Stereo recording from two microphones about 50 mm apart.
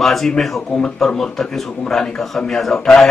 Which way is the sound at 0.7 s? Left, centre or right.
Centre.